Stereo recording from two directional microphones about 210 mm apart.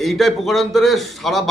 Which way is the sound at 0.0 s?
Centre (ahead or behind).